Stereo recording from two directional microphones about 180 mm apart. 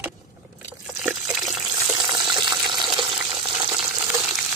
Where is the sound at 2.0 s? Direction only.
25° right (ahead or behind).